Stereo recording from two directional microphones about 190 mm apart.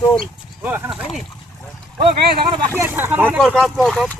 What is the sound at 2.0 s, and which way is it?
Speech, 25° right (ahead or behind).